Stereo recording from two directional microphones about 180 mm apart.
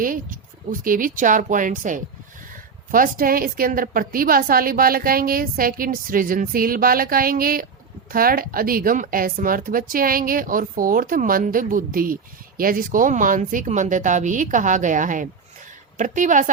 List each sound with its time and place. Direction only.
0.0 s a woman's voice: 50° right (ahead or behind)